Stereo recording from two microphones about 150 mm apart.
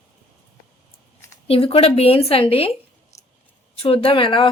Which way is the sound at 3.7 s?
40° left (ahead or behind).